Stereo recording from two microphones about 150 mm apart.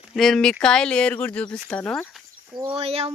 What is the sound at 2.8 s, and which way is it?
Speech, 40° right (ahead or behind).